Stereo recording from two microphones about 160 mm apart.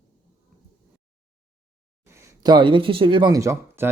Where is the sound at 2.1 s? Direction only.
15° right (ahead or behind).